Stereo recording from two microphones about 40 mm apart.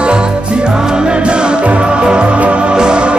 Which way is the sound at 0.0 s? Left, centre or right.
Right.